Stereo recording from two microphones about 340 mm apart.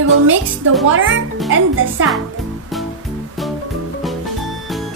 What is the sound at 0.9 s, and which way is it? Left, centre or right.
Speech, right.